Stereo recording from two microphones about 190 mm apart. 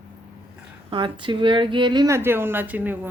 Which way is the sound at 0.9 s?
25° right (ahead or behind).